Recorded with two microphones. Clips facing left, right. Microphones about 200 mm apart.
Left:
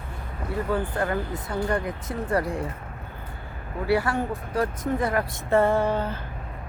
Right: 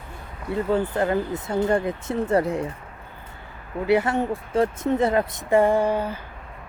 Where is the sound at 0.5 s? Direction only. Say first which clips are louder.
Right 4 dB; 25° right (ahead or behind).